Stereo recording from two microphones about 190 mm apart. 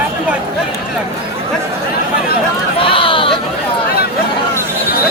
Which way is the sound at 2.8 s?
25° left (ahead or behind).